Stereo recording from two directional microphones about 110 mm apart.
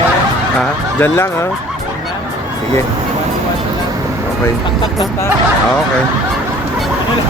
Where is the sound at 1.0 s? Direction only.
20° left (ahead or behind).